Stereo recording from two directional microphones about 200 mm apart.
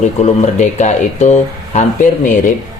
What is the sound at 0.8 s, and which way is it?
Speech, 35° left (ahead or behind).